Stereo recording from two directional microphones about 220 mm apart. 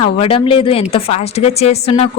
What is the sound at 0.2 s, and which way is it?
Speech, 25° left (ahead or behind).